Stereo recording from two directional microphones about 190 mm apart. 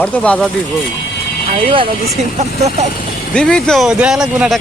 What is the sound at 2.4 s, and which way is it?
Speech, 40° right (ahead or behind).